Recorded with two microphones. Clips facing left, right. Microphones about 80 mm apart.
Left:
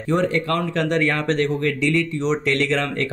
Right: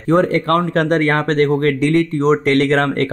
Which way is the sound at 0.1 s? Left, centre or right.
Right.